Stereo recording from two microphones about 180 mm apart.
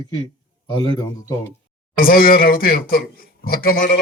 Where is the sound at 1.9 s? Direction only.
55° left (ahead or behind).